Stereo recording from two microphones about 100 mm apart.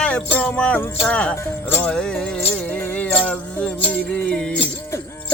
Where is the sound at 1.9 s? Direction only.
10° left (ahead or behind).